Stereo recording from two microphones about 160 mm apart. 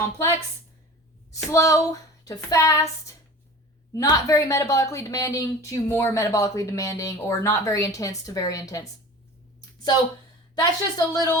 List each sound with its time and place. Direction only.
1.3 s a woman's voice: 20° left (ahead or behind)
3.9 s a woman's voice: 20° left (ahead or behind)
10.5 s a woman's voice: 25° left (ahead or behind)